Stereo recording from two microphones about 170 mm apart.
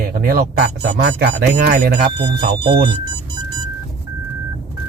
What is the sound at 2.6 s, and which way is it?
Speech, 30° right (ahead or behind).